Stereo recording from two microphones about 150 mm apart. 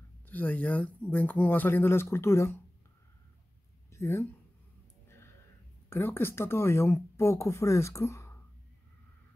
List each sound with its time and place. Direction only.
0.3 s speech: 10° left (ahead or behind)
3.9 s speech: 15° left (ahead or behind)
5.0 s a sound: 15° left (ahead or behind)
5.9 s speech: 15° left (ahead or behind)